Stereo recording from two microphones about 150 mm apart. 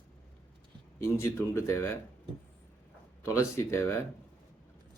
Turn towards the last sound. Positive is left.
turn(degrees=20)  # may be behind; listen again after turning